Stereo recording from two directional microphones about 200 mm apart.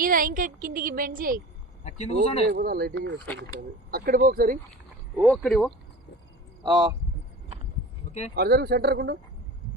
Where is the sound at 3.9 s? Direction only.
50° right (ahead or behind).